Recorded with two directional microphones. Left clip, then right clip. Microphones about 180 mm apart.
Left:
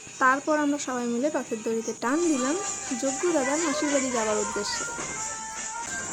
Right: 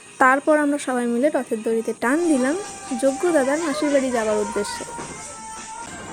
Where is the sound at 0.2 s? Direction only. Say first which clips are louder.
Right 6 dB; 30° right (ahead or behind).